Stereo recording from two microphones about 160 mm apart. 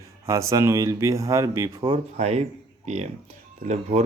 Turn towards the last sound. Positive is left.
turn(degrees=-45)  # may be behind; listen again after turning